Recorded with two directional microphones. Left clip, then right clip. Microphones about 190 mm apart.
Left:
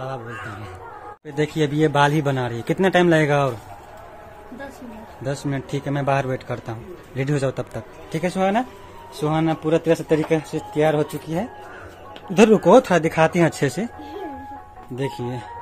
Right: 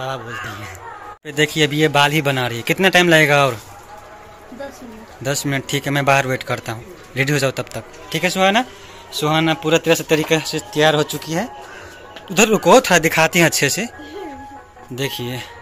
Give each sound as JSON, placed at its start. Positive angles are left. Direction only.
{"t": 1.2, "sound": "speech", "side_deg": 0}
{"t": 5.2, "sound": "a man's voice", "side_deg": 0}
{"t": 12.4, "sound": "speech", "side_deg": 15}
{"t": 15.0, "sound": "speech", "side_deg": 5}